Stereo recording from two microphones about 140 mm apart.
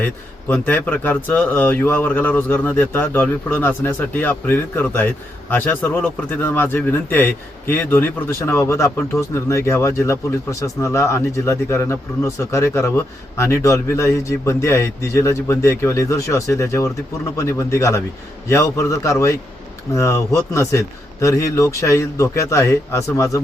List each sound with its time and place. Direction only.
0.0 s a man's voice: 15° left (ahead or behind)